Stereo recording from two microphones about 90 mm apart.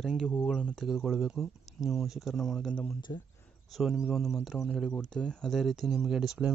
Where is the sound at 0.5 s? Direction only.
10° left (ahead or behind).